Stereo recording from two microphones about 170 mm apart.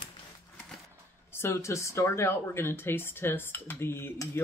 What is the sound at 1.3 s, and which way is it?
Speech, 15° left (ahead or behind).